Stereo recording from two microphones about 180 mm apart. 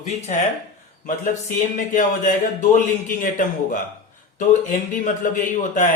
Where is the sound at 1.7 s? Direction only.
45° left (ahead or behind).